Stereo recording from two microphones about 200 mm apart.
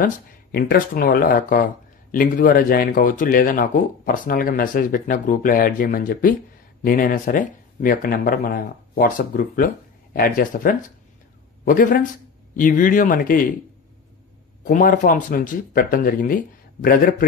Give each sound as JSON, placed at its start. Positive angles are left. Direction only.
{"t": 0.5, "sound": "a man's voice", "side_deg": 50}
{"t": 14.6, "sound": "speech", "side_deg": 40}